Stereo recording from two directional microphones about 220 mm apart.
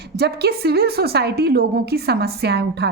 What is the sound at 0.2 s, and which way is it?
A woman's voice, 50° right (ahead or behind).